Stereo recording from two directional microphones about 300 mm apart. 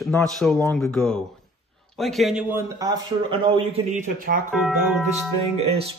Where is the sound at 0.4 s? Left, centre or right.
Centre; by 4.4 s right.